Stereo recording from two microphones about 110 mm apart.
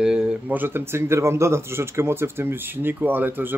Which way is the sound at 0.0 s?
5° right (ahead or behind).